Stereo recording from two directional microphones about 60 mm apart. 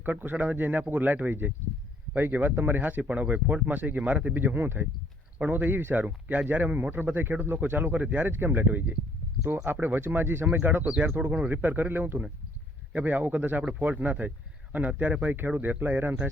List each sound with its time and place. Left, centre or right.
0.0 s a man's voice: right